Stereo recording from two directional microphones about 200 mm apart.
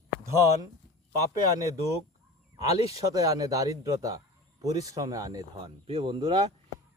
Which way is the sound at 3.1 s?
15° right (ahead or behind).